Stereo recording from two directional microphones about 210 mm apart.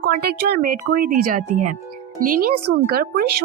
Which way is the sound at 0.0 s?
45° right (ahead or behind).